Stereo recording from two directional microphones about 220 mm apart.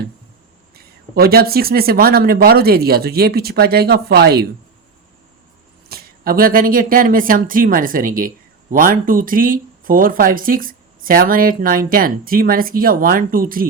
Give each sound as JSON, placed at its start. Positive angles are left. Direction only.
{"t": 1.1, "sound": "speech", "side_deg": -45}
{"t": 5.9, "sound": "speech", "side_deg": -40}